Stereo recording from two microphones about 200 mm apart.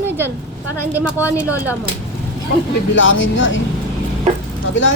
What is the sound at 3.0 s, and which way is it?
Speech, 70° left (ahead or behind).